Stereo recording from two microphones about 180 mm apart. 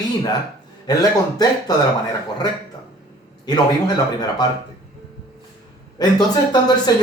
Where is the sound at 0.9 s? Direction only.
25° left (ahead or behind).